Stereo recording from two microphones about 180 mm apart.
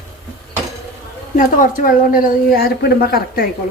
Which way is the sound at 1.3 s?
50° left (ahead or behind).